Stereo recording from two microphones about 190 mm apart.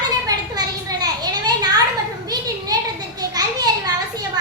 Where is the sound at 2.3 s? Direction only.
20° right (ahead or behind).